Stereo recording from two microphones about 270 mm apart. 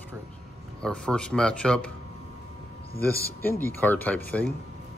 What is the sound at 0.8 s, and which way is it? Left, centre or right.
A man's voice, centre.